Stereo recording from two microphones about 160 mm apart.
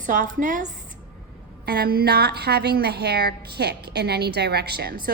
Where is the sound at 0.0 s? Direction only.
55° right (ahead or behind).